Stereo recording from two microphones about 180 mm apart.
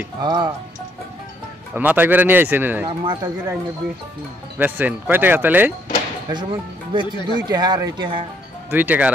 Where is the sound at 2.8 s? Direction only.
25° right (ahead or behind).